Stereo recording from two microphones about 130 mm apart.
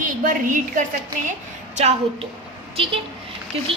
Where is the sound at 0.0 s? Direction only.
85° right.